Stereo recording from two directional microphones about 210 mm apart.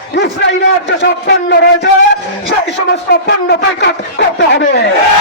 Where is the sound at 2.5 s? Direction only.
50° left (ahead or behind).